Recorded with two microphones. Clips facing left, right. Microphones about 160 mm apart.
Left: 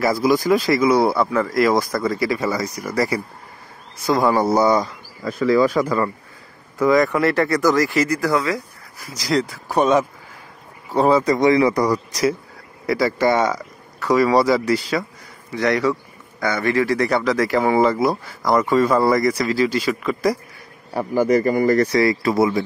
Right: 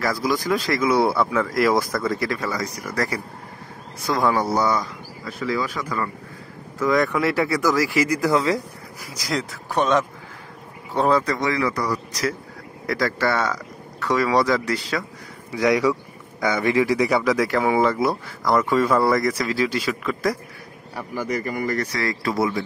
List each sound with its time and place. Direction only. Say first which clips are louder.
0.0 s a man's voice: left 6 dB; 10° left (ahead or behind)
4.5 s a man's voice: left 5 dB; 15° left (ahead or behind)
4.7 s speech: left 5 dB; 40° left (ahead or behind)
6.9 s speech: left 3 dB; centre (ahead or behind); by 8.5 s 25° right (ahead or behind)
9.0 s speech: left 6 dB; 10° right (ahead or behind)
9.7 s a man's voice: left 3 dB; 10° left (ahead or behind)
15.5 s speech: even; 10° right (ahead or behind)
20.9 s speech: left 10 dB; 40° left (ahead or behind)
21.9 s a man's voice: left 7 dB; 10° left (ahead or behind)